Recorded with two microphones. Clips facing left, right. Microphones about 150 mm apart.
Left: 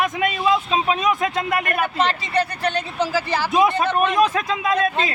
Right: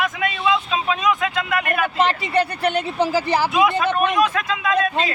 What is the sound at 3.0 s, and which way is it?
Speech, 15° right (ahead or behind).